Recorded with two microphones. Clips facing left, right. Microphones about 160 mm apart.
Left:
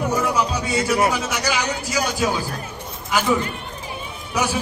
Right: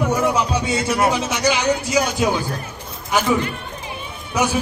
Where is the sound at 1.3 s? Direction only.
20° right (ahead or behind).